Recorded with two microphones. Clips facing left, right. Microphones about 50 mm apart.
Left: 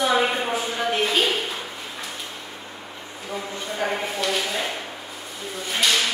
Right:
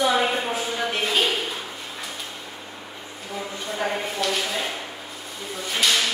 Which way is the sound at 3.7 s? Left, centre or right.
Centre.